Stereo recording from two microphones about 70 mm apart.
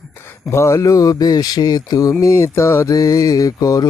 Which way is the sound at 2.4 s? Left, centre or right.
Left.